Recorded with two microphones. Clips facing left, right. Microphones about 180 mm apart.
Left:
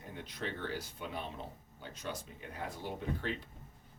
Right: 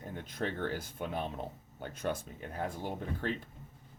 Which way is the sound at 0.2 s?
50° right (ahead or behind).